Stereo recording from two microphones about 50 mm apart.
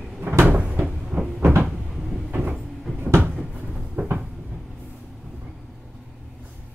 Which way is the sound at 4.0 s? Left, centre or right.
Right.